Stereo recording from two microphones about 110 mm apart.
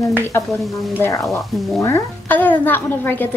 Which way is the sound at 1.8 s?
25° left (ahead or behind).